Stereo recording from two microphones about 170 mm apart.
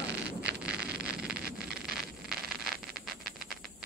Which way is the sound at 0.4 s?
75° right (ahead or behind).